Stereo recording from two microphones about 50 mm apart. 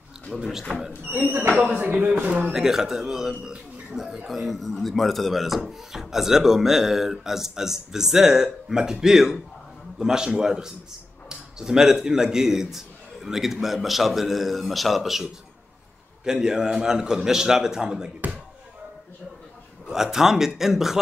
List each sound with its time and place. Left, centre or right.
0.4 s speech: centre
1.8 s a man's voice: right
2.5 s a man's voice: centre
16.3 s speech: centre
19.9 s speech: centre